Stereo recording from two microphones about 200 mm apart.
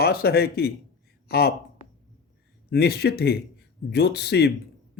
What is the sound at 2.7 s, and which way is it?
Speech, 50° left (ahead or behind).